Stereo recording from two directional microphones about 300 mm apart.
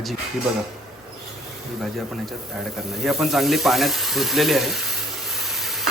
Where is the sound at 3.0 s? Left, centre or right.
Centre.